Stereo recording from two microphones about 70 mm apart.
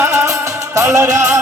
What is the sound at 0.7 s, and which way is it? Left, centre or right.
Music, right.